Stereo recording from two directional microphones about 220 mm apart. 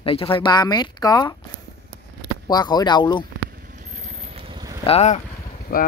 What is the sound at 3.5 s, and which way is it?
Vehicle, 40° right (ahead or behind).